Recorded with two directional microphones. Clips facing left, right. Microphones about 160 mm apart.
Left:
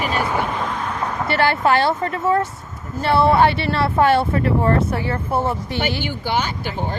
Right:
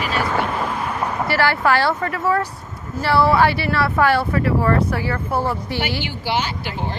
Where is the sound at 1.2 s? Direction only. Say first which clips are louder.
Left 1 dB; 20° left (ahead or behind).